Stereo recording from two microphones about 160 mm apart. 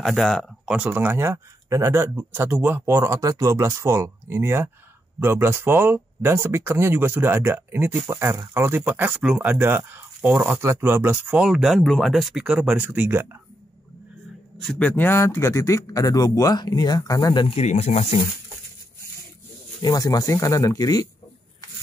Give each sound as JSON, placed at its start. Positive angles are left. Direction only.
{"t": 0.0, "sound": "speech", "side_deg": 0}
{"t": 14.7, "sound": "a man's voice", "side_deg": 10}
{"t": 19.8, "sound": "a man's voice", "side_deg": 25}